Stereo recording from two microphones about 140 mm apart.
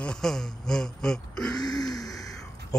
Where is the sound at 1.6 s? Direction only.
30° left (ahead or behind).